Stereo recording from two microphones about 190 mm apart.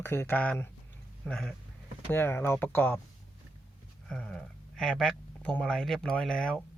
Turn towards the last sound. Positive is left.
turn(degrees=5)  # may be behind; listen again after turning